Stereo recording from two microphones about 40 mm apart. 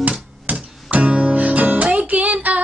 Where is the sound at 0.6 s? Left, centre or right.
Right.